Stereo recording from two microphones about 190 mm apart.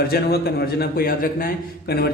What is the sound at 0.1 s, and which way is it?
A man's voice, 55° left (ahead or behind).